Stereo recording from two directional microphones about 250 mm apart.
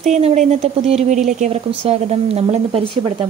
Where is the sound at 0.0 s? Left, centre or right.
Right.